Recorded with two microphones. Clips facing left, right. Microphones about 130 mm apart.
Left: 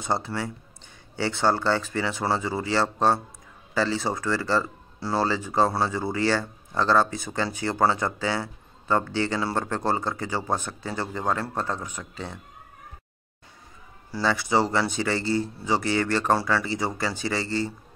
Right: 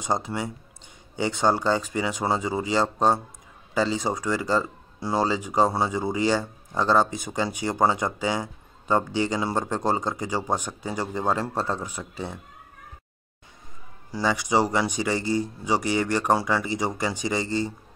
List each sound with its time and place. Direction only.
0.0 s speech: 20° right (ahead or behind)
14.1 s speech: 15° right (ahead or behind)